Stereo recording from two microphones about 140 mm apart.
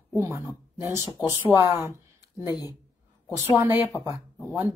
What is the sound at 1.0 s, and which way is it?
Speech, 30° left (ahead or behind).